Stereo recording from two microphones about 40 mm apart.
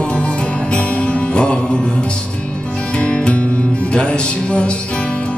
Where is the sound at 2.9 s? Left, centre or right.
Left.